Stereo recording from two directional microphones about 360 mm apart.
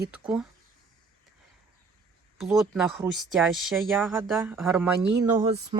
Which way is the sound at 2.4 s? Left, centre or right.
Centre.